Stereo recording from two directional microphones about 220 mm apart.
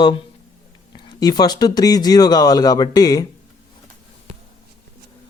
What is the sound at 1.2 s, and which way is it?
Speech, 20° left (ahead or behind).